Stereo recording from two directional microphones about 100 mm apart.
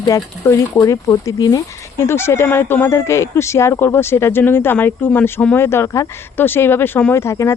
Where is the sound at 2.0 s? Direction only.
25° left (ahead or behind).